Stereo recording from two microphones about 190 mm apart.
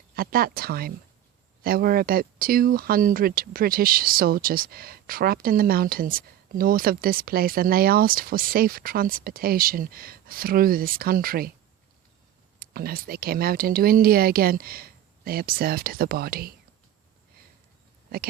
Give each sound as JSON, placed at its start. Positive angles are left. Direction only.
{"t": 0.2, "sound": "speech", "side_deg": -50}
{"t": 12.5, "sound": "speech", "side_deg": -50}